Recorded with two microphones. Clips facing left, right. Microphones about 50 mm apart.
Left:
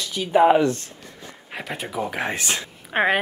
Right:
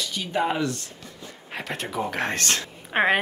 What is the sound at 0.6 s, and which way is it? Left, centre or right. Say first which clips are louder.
Speech: left 6 dB; left.